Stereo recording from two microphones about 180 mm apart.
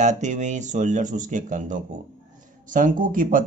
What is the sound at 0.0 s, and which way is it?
Speech, 40° right (ahead or behind).